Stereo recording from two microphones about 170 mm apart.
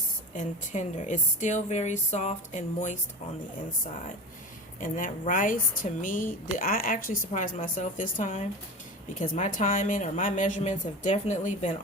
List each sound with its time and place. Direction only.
0.3 s a woman's voice: 45° left (ahead or behind)
4.8 s a woman's voice: 50° left (ahead or behind)